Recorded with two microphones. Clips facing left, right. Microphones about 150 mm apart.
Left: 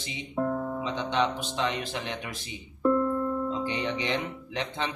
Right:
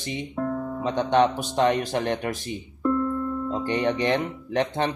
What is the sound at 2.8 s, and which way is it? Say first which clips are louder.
Music: even; centre (ahead or behind).